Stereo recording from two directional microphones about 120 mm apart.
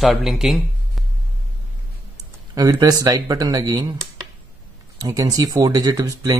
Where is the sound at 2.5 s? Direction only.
30° right (ahead or behind).